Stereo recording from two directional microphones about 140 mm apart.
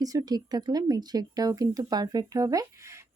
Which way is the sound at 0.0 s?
25° right (ahead or behind).